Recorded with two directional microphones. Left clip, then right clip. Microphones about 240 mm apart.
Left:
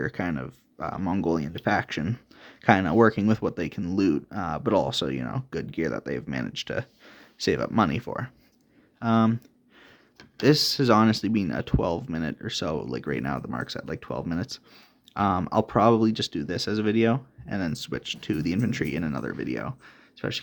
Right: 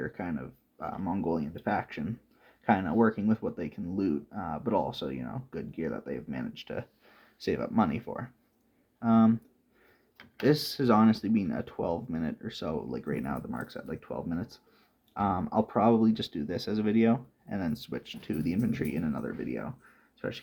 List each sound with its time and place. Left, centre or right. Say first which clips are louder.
0.0 s speech: left 6 dB; left
10.4 s speech: left 5 dB; left